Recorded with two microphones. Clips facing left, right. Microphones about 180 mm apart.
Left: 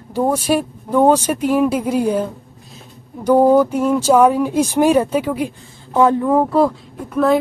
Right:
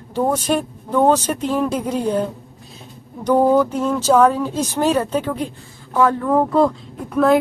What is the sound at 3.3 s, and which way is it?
Speech, 10° left (ahead or behind).